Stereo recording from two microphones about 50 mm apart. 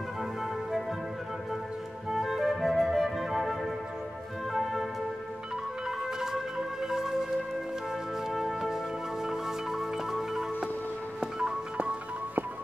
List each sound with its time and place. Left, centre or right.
0.2 s music: centre
2.0 s flute: centre
4.5 s music: centre
5.9 s music: centre
11.1 s music: centre